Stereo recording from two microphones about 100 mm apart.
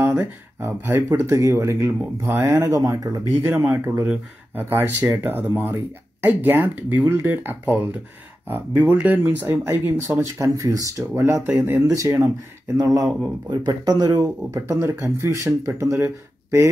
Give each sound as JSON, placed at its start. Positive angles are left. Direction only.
{"t": 0.0, "sound": "speech", "side_deg": -25}
{"t": 10.4, "sound": "speech", "side_deg": -35}